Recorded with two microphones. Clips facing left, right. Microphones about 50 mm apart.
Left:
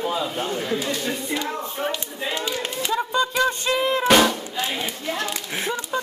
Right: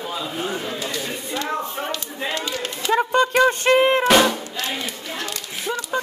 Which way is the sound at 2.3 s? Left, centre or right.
Centre.